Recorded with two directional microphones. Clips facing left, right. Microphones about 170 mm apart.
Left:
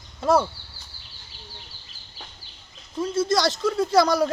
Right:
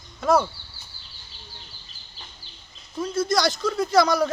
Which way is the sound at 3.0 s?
25° left (ahead or behind).